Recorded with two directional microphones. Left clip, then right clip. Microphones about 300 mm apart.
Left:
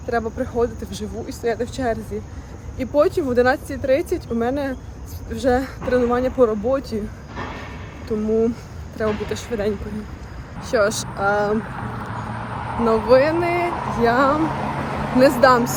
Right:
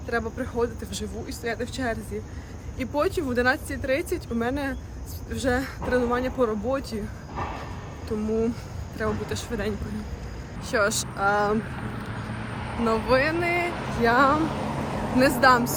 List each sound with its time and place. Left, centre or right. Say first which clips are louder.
0.1 s speech: left 6 dB; centre
9.0 s speech: left 6 dB; centre
11.5 s vehicle: left 4 dB; centre
13.1 s speech: left 7 dB; centre
13.7 s female singing: left 6 dB; centre
14.0 s speech: left 3 dB; centre
14.3 s vehicle: left 5 dB; centre
15.4 s speech: left 4 dB; centre